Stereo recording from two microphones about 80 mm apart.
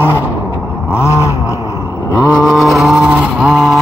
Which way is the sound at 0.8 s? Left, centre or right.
Left.